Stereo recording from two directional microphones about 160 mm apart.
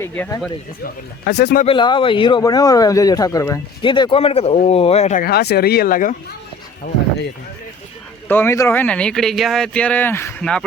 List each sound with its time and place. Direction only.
0.0 s speech: 20° left (ahead or behind)
1.2 s speech: 90° left
1.6 s speech: 30° left (ahead or behind)
3.8 s speech: 30° left (ahead or behind)
5.2 s speech: 85° left; by 6.1 s 55° left (ahead or behind)
8.3 s speech: 15° left (ahead or behind)